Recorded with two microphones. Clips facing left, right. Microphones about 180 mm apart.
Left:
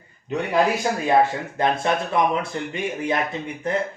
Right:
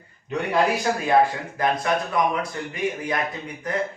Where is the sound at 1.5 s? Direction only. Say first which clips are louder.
Left 1 dB; 25° left (ahead or behind).